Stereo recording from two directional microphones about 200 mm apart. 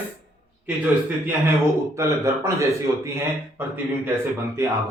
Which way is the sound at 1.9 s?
15° right (ahead or behind).